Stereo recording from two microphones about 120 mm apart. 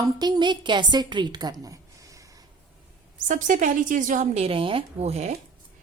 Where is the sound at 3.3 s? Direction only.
90° right; by 5.3 s 65° right (ahead or behind).